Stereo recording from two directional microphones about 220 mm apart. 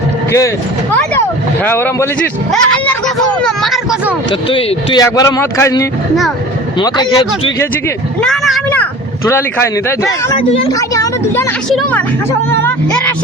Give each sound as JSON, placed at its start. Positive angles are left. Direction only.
{"t": 0.3, "sound": "speech", "side_deg": 15}
{"t": 1.6, "sound": "a man's voice", "side_deg": 10}
{"t": 4.4, "sound": "speech", "side_deg": 25}
{"t": 8.2, "sound": "speech", "side_deg": 0}
{"t": 10.3, "sound": "speech", "side_deg": 25}
{"t": 10.8, "sound": "speech", "side_deg": 15}
{"t": 11.7, "sound": "a man's voice", "side_deg": 5}